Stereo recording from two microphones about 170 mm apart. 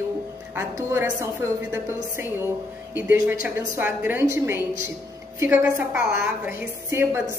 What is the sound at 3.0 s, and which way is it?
A woman's voice, 10° right (ahead or behind).